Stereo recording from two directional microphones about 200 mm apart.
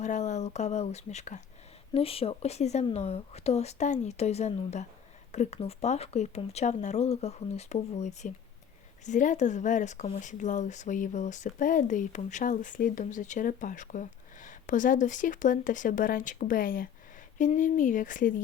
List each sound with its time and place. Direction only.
0.0 s speech: 35° left (ahead or behind)